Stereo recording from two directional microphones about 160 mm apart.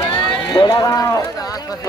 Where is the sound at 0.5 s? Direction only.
25° left (ahead or behind).